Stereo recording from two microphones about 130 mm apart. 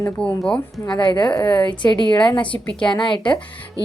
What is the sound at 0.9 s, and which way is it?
A woman's voice, 35° left (ahead or behind).